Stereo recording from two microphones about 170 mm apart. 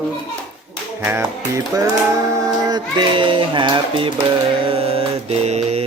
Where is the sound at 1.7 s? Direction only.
20° right (ahead or behind).